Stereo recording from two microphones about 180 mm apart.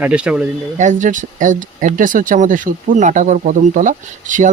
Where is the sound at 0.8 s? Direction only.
45° right (ahead or behind).